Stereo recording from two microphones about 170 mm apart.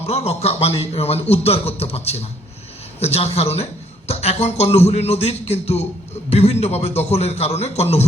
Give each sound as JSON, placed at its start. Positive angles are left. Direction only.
{"t": 0.0, "sound": "a man's voice", "side_deg": 40}